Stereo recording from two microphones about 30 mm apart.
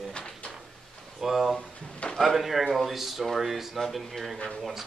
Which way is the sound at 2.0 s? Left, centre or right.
Left.